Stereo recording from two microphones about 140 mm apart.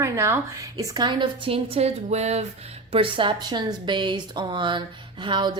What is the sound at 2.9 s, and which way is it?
A woman's voice, 40° right (ahead or behind).